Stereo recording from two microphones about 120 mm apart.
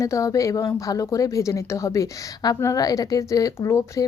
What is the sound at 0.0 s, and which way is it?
Speech, 25° left (ahead or behind).